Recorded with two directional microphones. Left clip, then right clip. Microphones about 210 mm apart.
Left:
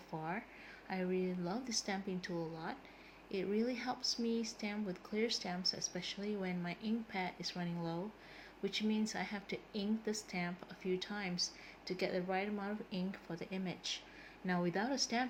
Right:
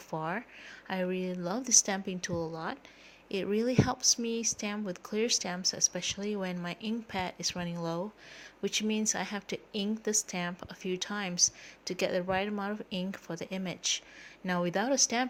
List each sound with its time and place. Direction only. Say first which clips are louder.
0.1 s speech: right 8 dB; 55° right (ahead or behind)